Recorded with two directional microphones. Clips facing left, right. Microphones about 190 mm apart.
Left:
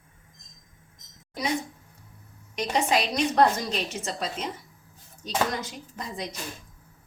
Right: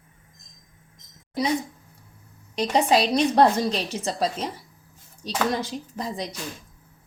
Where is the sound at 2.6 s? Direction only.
35° right (ahead or behind).